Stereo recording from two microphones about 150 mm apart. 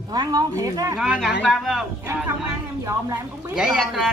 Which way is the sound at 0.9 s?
5° right (ahead or behind).